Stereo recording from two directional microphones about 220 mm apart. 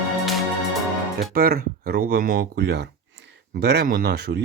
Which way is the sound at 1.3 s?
45° right (ahead or behind).